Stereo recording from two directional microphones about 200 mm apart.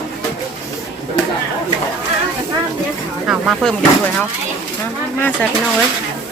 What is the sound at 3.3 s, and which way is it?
Speech, centre (ahead or behind).